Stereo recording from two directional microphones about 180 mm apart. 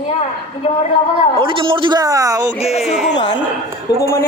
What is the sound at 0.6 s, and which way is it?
Speech, 40° left (ahead or behind).